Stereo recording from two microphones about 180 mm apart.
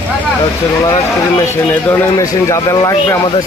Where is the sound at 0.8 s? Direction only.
20° left (ahead or behind).